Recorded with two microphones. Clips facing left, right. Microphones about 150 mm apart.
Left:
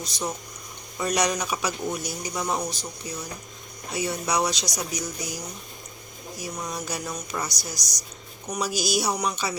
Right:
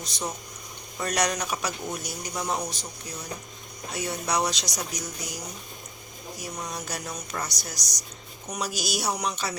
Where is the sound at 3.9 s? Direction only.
10° left (ahead or behind).